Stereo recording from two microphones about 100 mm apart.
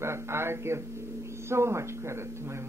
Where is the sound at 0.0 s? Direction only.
25° right (ahead or behind).